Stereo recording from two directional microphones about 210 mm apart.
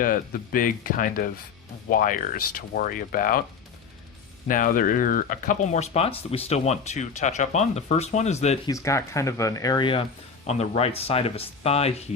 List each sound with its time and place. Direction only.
0.0 s speech: 40° left (ahead or behind)
4.4 s speech: 40° left (ahead or behind)
8.7 s speech: 15° left (ahead or behind); by 11.9 s 30° left (ahead or behind)